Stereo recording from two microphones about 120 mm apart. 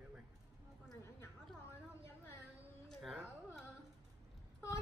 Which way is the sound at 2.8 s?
Centre (ahead or behind).